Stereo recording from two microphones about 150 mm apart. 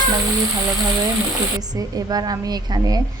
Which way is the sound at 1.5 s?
25° right (ahead or behind).